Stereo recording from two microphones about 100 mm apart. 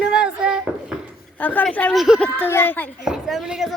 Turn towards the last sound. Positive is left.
turn(degrees=-5)  # may be behind; listen again after turning